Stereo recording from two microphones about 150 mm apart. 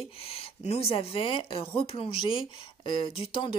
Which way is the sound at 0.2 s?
40° left (ahead or behind).